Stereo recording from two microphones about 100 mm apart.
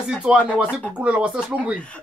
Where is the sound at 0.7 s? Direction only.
15° left (ahead or behind).